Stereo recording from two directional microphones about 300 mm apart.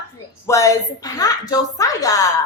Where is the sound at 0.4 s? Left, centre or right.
Centre.